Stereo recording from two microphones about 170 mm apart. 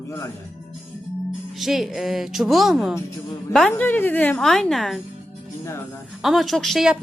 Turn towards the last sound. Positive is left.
turn(degrees=0)  # may be behind; listen again after turning